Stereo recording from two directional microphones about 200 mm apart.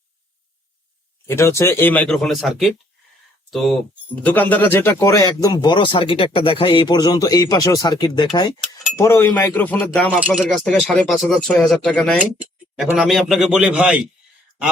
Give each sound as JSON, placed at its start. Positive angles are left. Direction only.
{"t": 1.3, "sound": "speech", "side_deg": 15}
{"t": 10.2, "sound": "speech", "side_deg": -5}